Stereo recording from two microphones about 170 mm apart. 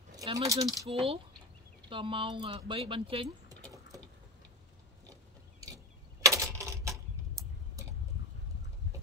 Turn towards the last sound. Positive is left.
turn(degrees=-20)  # may be behind; listen again after turning